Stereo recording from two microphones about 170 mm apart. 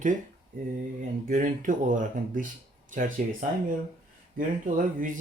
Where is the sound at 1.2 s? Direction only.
50° right (ahead or behind).